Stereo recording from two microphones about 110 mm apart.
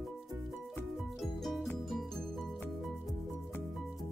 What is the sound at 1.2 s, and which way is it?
Music, centre (ahead or behind).